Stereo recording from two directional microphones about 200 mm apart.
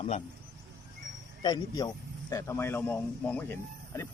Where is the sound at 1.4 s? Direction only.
20° left (ahead or behind).